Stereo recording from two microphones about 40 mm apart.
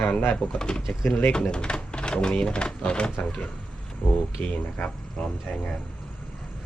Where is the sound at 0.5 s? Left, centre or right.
Left.